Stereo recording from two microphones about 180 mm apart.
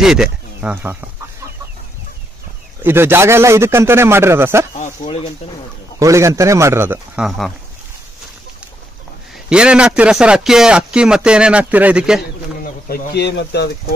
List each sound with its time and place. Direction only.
0.0 s speech: 5° right (ahead or behind)
2.8 s a man's voice: 15° right (ahead or behind)
5.0 s speech: 30° left (ahead or behind)
5.9 s a man's voice: 15° right (ahead or behind); by 7.5 s centre (ahead or behind)
9.5 s a man's voice: 5° right (ahead or behind)
12.8 s speech: 60° left (ahead or behind)